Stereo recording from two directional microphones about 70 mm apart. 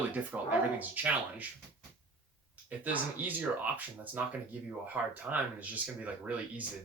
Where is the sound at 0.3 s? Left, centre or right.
Right.